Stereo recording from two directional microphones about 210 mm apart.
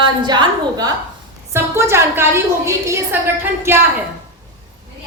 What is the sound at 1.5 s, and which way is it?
A woman's voice, 10° right (ahead or behind).